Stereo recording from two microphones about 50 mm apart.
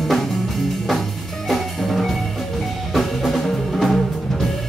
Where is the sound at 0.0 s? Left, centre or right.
Centre.